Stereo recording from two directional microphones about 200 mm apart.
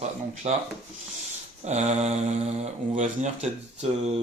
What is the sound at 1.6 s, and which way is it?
Speech, 35° right (ahead or behind).